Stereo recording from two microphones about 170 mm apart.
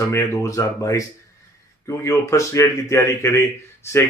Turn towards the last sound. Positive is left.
turn(degrees=15)  # may be behind; listen again after turning